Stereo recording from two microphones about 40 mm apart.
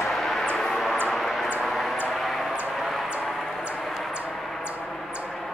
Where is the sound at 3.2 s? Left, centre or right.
Centre.